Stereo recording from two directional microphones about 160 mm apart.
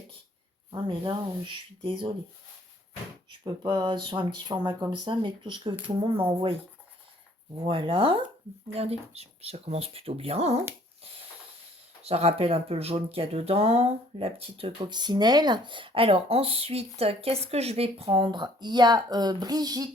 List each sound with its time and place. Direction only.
0.7 s speech: 30° right (ahead or behind)
3.4 s speech: 25° right (ahead or behind)
7.5 s speech: 35° right (ahead or behind)
12.0 s speech: 40° right (ahead or behind)